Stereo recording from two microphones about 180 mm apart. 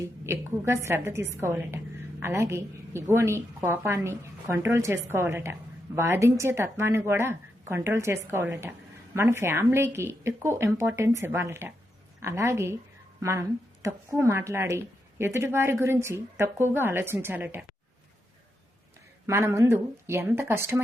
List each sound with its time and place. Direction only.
0.0 s a woman's voice: 15° right (ahead or behind)
13.8 s a woman's voice: 15° right (ahead or behind)
19.3 s a woman's voice: 15° right (ahead or behind)